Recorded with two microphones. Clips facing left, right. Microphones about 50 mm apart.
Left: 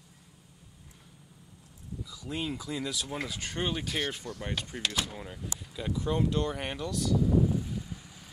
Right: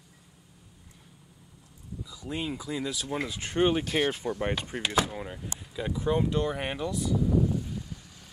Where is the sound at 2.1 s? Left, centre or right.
Centre.